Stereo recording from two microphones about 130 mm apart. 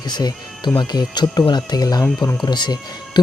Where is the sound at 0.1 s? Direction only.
30° left (ahead or behind).